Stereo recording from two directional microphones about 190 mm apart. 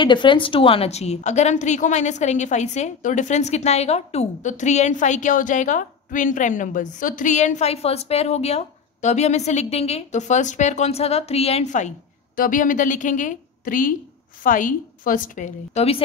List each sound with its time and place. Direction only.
0.0 s a woman's voice: 25° left (ahead or behind)